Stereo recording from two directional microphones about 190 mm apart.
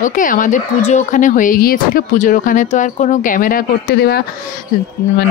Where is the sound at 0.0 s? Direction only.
45° left (ahead or behind).